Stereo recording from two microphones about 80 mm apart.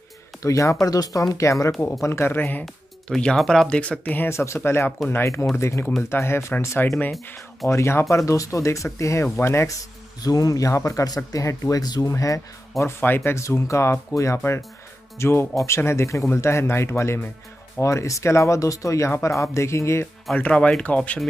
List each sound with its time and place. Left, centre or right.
0.4 s speech: left
2.6 s speech: centre
4.3 s speech: left
10.2 s speech: left
11.8 s speech: left
12.1 s speech: left
13.0 s speech: left
20.3 s speech: centre